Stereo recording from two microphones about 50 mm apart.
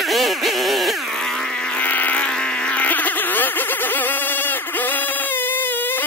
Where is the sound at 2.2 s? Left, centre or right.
Centre; by 6.0 s left.